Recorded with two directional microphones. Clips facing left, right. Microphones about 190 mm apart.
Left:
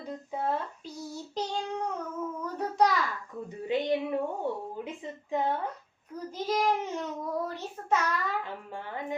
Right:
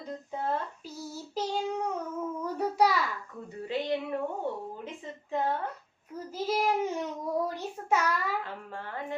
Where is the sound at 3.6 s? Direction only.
20° left (ahead or behind).